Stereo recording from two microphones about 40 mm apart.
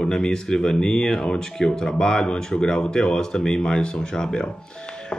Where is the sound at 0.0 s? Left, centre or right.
Centre.